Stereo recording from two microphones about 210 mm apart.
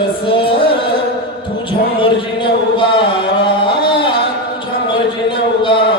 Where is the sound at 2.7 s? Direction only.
25° left (ahead or behind).